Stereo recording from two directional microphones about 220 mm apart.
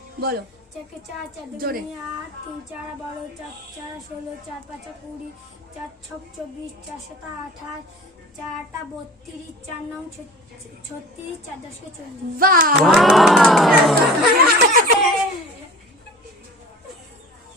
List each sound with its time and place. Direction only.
0.2 s a woman's voice: 45° right (ahead or behind)
1.5 s speech: 40° right (ahead or behind)
12.4 s speech: 40° right (ahead or behind)
12.8 s speech: centre (ahead or behind)
14.3 s snicker: 40° right (ahead or behind)